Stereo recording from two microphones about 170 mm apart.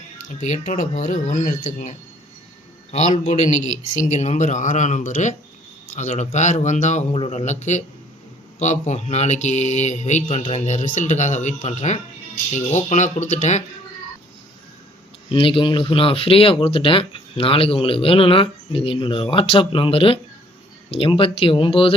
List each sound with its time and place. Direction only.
0.3 s speech: 45° left (ahead or behind)
15.3 s speech: 30° left (ahead or behind)